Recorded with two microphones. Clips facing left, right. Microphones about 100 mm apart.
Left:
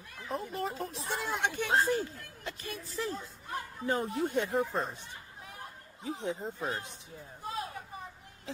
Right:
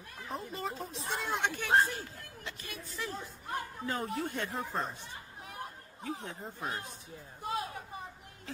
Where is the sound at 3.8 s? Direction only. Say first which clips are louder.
Left 6 dB; 25° left (ahead or behind).